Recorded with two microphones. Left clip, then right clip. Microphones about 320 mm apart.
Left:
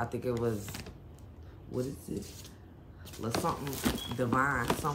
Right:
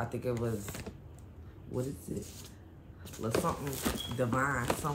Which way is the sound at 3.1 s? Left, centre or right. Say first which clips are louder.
Even; centre.